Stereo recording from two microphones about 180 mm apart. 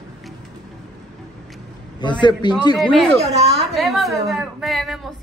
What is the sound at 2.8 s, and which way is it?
Speech, centre (ahead or behind).